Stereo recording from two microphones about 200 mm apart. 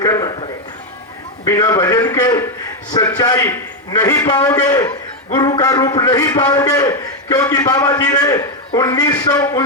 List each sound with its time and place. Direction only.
0.0 s music: 20° left (ahead or behind)
1.5 s a man's voice: 20° left (ahead or behind)